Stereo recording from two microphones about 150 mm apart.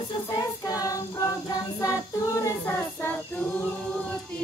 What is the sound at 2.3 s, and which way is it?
Child singing, 15° left (ahead or behind).